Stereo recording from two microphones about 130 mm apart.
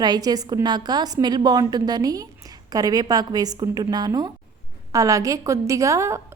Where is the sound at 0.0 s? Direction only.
30° right (ahead or behind).